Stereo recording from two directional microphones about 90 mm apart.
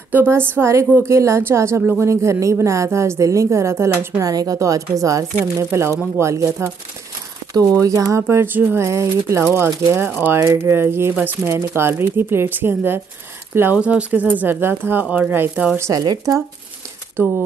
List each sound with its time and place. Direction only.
0.1 s a woman's voice: 25° right (ahead or behind)
4.2 s speech: 45° right (ahead or behind)
7.5 s speech: 40° right (ahead or behind)
8.1 s speech: 30° right (ahead or behind)
10.4 s speech: 30° right (ahead or behind)
13.7 s speech: 15° right (ahead or behind); by 16.0 s 30° right (ahead or behind)
16.0 s speech: 45° right (ahead or behind)
17.2 s speech: 25° right (ahead or behind)